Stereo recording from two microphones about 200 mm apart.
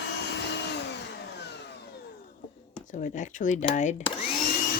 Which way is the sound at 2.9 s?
40° left (ahead or behind).